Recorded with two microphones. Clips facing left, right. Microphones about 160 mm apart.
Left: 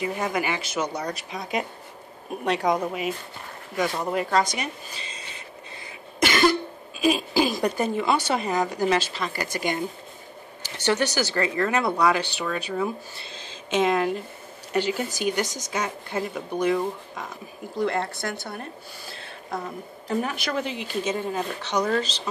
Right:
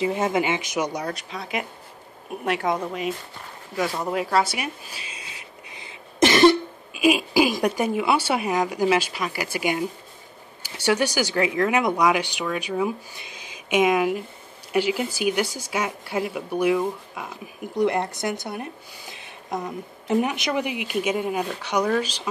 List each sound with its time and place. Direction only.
0.0 s speech: 25° right (ahead or behind)
1.3 s a woman's voice: 15° left (ahead or behind)
2.9 s speech: 5° left (ahead or behind)
6.9 s speech: 10° right (ahead or behind)